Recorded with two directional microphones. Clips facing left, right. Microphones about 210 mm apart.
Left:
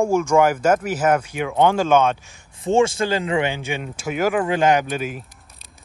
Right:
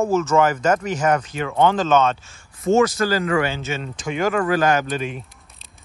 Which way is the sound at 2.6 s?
30° left (ahead or behind).